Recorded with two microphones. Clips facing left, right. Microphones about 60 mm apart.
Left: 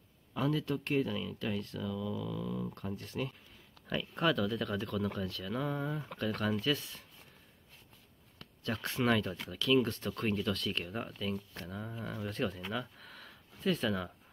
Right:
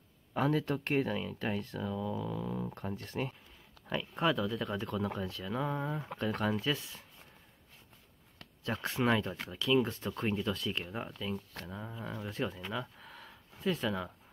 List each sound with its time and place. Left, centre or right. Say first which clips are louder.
0.3 s speech: right 2 dB; right
3.9 s speech: even; centre
4.6 s speech: even; centre
8.8 s speech: even; centre